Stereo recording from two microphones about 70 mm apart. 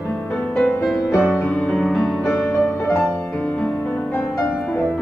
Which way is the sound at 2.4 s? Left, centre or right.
Left.